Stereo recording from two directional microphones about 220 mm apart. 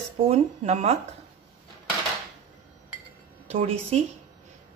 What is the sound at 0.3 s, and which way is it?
Speech, 30° right (ahead or behind).